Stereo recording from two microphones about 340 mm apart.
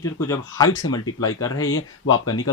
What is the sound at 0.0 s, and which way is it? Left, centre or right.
Speech, centre.